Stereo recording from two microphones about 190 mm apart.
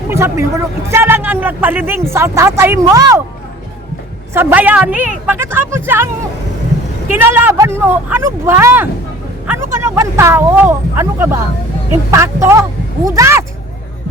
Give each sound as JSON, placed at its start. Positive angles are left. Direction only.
{"t": 0.1, "sound": "a man's voice", "side_deg": -15}
{"t": 4.4, "sound": "a man's voice", "side_deg": -10}
{"t": 7.1, "sound": "a man's voice", "side_deg": -10}